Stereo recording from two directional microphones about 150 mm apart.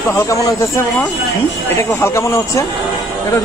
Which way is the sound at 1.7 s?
20° left (ahead or behind).